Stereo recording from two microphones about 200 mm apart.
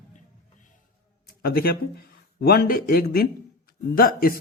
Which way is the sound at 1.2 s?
50° left (ahead or behind).